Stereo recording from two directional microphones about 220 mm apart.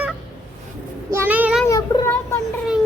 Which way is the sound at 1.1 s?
10° right (ahead or behind).